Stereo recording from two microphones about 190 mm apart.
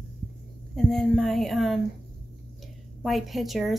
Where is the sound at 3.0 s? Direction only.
Centre (ahead or behind).